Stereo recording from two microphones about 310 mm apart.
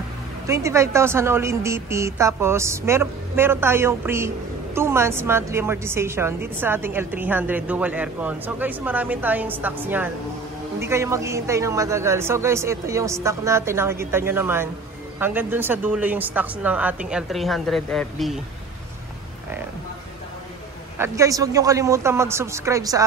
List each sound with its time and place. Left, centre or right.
0.5 s a man's voice: centre
21.0 s a man's voice: centre